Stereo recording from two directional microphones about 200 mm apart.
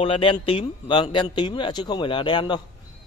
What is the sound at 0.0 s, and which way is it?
Speech, 25° left (ahead or behind).